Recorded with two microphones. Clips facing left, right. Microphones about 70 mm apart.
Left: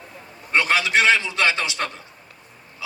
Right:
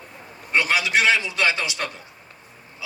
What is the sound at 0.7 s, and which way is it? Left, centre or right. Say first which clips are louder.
A man's voice: left 2 dB; centre.